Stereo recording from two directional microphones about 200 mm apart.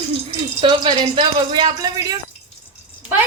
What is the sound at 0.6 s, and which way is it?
Speech, 25° right (ahead or behind).